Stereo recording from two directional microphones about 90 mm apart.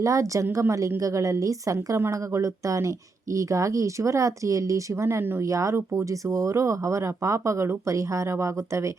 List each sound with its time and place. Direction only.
0.0 s speech: 35° right (ahead or behind)